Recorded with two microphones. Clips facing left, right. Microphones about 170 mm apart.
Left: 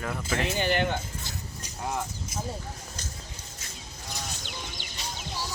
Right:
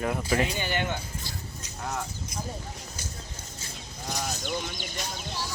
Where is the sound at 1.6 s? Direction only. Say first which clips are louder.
Left 2 dB; 10° left (ahead or behind).